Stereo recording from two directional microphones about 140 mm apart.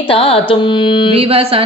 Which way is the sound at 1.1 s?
40° right (ahead or behind).